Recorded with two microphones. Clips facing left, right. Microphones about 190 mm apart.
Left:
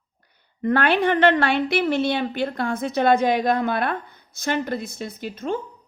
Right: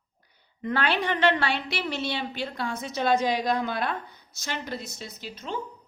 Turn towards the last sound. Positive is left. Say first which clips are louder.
# left 8 dB
turn(degrees=50)  # may be behind; listen again after turning